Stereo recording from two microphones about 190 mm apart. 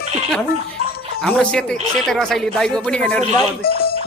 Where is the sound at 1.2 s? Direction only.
5° left (ahead or behind).